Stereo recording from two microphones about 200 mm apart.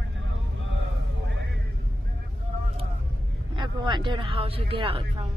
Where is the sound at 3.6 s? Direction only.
20° right (ahead or behind).